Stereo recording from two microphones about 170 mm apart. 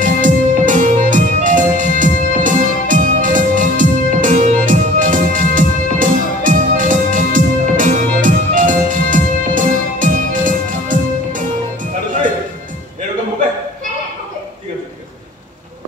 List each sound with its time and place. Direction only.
0.0 s music: 50° right (ahead or behind)